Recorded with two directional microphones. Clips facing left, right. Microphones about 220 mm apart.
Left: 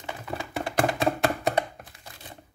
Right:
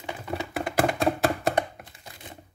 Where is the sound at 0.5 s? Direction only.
Centre (ahead or behind).